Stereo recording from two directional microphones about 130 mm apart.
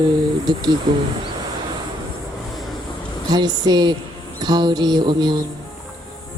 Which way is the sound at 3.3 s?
35° right (ahead or behind).